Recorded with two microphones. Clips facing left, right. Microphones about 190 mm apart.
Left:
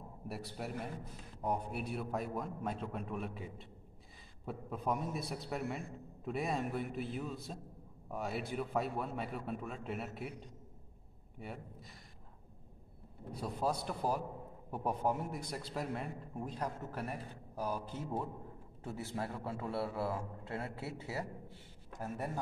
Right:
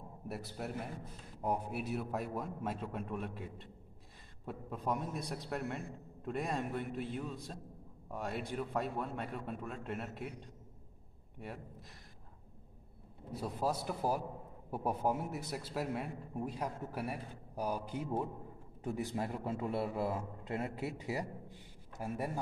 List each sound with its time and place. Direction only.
0.3 s a man's voice: centre (ahead or behind)
11.3 s a man's voice: centre (ahead or behind)
13.3 s a man's voice: 5° right (ahead or behind)